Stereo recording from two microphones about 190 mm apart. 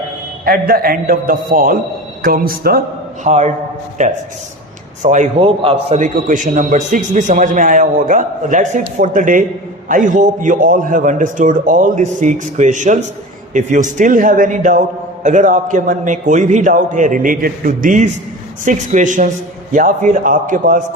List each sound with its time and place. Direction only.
0.4 s a man's voice: 50° right (ahead or behind)
3.2 s a man's voice: 35° right (ahead or behind)
6.0 s a man's voice: 45° right (ahead or behind)